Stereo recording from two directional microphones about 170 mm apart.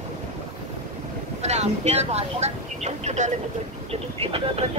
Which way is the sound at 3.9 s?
35° right (ahead or behind).